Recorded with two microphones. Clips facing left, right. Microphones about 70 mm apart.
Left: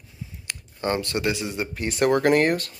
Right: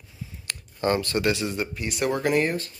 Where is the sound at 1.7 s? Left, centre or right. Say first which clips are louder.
Left 5 dB; left.